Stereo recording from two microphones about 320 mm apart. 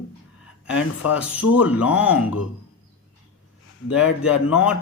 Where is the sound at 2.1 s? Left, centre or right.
Left.